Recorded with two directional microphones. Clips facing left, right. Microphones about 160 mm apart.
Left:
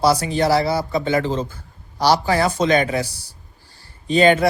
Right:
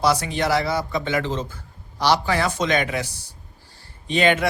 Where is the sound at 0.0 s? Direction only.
35° left (ahead or behind).